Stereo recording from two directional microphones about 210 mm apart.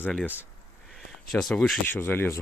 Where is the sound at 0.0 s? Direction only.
5° left (ahead or behind).